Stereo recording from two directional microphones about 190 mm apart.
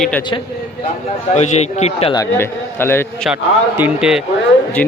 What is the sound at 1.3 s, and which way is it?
Speech, 35° left (ahead or behind).